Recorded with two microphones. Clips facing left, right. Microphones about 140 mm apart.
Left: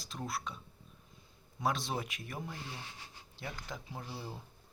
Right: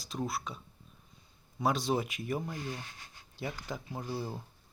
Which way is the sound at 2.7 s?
30° left (ahead or behind).